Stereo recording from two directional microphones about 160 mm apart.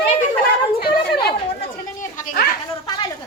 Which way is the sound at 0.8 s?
85° left.